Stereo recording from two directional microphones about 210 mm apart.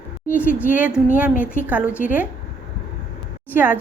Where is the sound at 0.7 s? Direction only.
5° right (ahead or behind).